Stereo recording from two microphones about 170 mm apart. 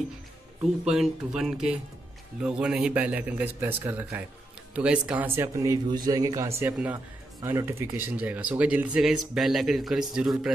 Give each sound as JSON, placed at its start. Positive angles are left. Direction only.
{"t": 0.6, "sound": "a man's voice", "side_deg": -5}